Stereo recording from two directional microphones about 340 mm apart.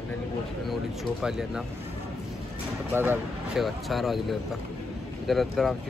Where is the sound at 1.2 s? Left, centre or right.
Centre.